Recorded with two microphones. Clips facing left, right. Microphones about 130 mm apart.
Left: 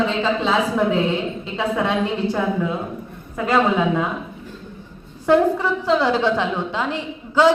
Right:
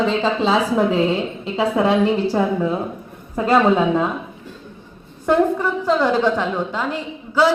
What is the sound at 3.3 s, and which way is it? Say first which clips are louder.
Speech: right 3 dB; 30° right (ahead or behind).